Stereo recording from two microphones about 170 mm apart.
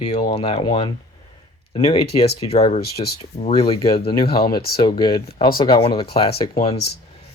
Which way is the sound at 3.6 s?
35° left (ahead or behind).